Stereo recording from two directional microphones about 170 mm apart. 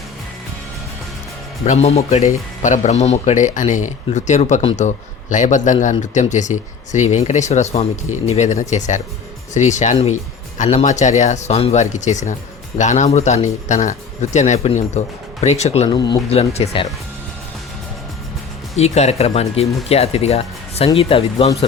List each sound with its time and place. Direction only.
1.6 s speech: 40° left (ahead or behind)
15.9 s speech: 25° left (ahead or behind)
16.3 s speech: 35° left (ahead or behind)
18.8 s speech: 40° left (ahead or behind)